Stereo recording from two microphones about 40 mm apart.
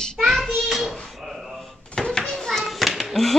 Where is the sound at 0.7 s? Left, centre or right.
Centre.